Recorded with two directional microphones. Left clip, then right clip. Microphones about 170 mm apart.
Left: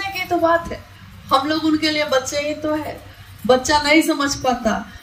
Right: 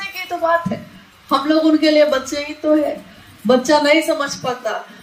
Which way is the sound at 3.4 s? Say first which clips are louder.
Right 2 dB; 45° left (ahead or behind).